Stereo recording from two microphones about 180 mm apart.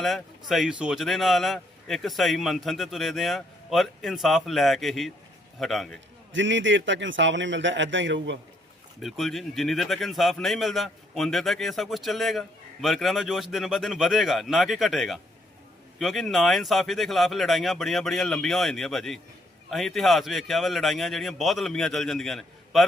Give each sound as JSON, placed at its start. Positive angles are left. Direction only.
{"t": 0.0, "sound": "speech", "side_deg": 0}
{"t": 6.3, "sound": "a man's voice", "side_deg": -90}
{"t": 9.0, "sound": "speech", "side_deg": 0}